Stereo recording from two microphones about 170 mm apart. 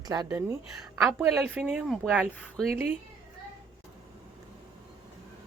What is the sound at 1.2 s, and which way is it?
A woman's voice, 5° right (ahead or behind).